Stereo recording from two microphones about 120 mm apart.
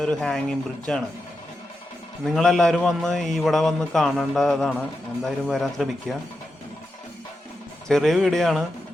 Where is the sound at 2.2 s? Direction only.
5° left (ahead or behind).